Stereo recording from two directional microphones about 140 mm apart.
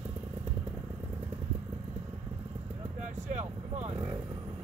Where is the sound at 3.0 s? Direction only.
55° right (ahead or behind).